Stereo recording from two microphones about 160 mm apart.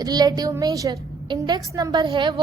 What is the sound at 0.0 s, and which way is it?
A woman's voice, 25° right (ahead or behind).